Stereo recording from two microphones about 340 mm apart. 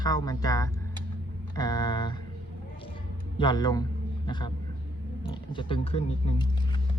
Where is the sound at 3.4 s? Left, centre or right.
Centre.